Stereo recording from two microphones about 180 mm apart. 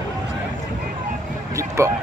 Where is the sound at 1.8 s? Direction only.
15° right (ahead or behind).